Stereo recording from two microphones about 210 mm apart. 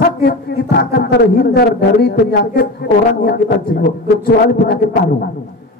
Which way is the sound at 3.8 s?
50° left (ahead or behind).